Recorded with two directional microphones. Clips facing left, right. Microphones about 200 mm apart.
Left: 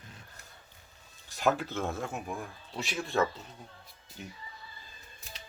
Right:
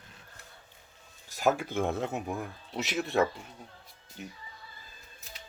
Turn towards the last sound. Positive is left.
turn(degrees=-5)  # may be behind; listen again after turning